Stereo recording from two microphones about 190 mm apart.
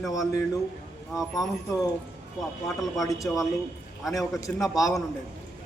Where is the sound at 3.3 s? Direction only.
10° left (ahead or behind).